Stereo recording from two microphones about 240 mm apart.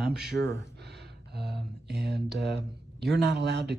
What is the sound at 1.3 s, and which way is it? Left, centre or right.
Speech, right.